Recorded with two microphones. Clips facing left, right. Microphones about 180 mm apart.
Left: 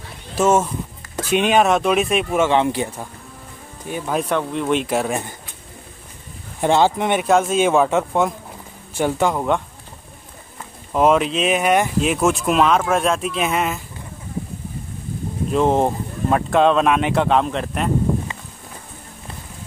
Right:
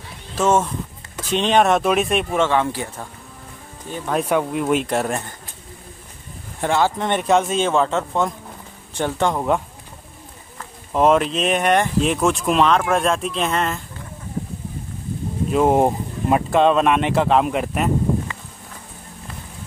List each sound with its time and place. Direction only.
0.4 s speech: 10° left (ahead or behind)
2.5 s speech: 20° left (ahead or behind)
3.9 s speech: 10° left (ahead or behind)
4.2 s speech: 10° right (ahead or behind)
6.6 s speech: 20° left (ahead or behind)
7.1 s speech: 5° left (ahead or behind)
10.9 s speech: centre (ahead or behind)
15.5 s speech: 10° right (ahead or behind)